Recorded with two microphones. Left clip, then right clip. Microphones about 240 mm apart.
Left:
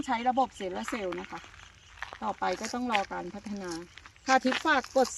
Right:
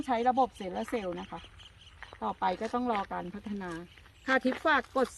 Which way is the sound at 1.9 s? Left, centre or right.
Left.